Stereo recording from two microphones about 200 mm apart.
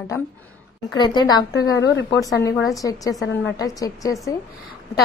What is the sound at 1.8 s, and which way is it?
Speech, 60° left (ahead or behind).